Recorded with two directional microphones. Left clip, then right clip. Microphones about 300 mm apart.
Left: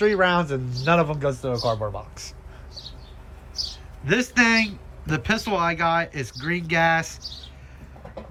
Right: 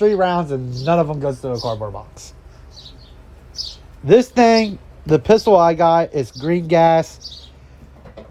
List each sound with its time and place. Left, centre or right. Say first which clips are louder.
0.0 s a man's voice: right 4 dB; centre
4.0 s speech: right 8 dB; centre